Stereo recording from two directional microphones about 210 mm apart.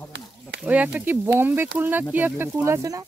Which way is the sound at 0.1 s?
55° right (ahead or behind).